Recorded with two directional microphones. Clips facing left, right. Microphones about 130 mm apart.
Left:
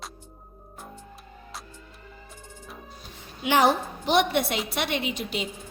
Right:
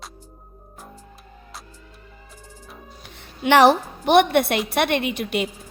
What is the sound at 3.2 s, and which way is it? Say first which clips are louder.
A woman's voice: right 7 dB; 70° right (ahead or behind).